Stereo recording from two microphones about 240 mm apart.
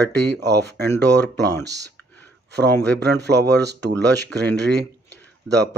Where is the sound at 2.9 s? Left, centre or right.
Right.